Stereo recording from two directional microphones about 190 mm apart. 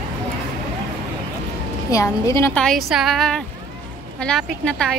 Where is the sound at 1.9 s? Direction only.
15° left (ahead or behind).